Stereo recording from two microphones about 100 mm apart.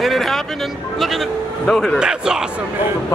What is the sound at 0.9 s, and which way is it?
Speech, centre (ahead or behind).